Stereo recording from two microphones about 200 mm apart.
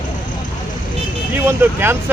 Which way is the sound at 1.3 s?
10° right (ahead or behind).